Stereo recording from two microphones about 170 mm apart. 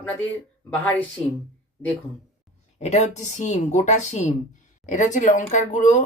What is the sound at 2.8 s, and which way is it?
Speech, 40° left (ahead or behind).